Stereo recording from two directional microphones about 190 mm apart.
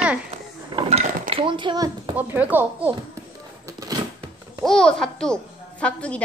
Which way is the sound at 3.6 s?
20° right (ahead or behind).